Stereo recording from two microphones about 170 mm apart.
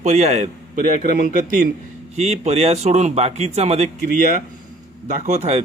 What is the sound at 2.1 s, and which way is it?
A man's voice, 40° right (ahead or behind).